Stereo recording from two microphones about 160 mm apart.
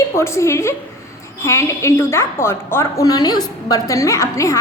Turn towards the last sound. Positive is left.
turn(degrees=20)  # may be behind; listen again after turning